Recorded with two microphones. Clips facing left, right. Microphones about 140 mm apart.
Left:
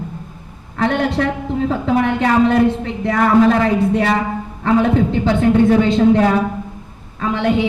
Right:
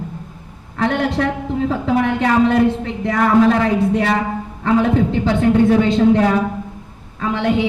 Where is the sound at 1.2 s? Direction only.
55° left (ahead or behind).